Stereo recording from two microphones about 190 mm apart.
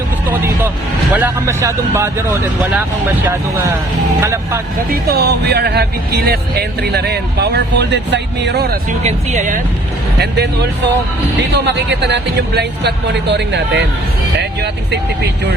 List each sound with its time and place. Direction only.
1.1 s speech: 15° right (ahead or behind)
3.2 s speech: 15° right (ahead or behind)
5.0 s speech: 55° right (ahead or behind)
9.0 s speech: 40° right (ahead or behind)
10.2 s speech: 60° right (ahead or behind)